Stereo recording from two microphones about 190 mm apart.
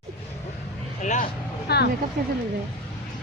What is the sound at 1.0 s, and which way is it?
Vehicle, 40° left (ahead or behind).